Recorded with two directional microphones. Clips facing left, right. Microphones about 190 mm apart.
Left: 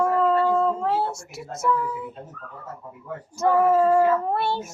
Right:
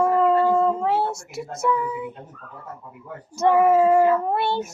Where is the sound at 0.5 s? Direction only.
5° right (ahead or behind).